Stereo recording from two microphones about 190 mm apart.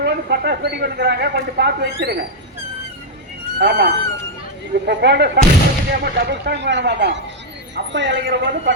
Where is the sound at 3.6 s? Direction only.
55° right (ahead or behind).